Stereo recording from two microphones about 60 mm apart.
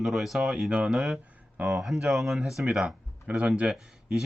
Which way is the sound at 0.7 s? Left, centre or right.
Centre.